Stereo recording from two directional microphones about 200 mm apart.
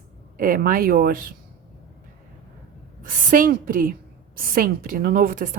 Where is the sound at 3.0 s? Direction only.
40° right (ahead or behind).